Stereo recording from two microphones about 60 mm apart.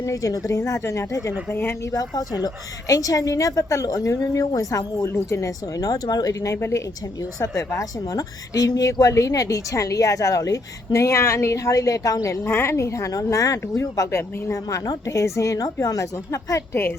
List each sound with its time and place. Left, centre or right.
0.0 s a woman's voice: left
1.5 s speech: left
1.9 s speech: left
2.8 s a woman's voice: left
5.0 s a woman's voice: left
12.5 s a woman's voice: left
14.2 s a woman's voice: left